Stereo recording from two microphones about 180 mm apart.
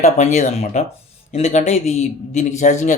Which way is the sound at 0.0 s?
40° left (ahead or behind).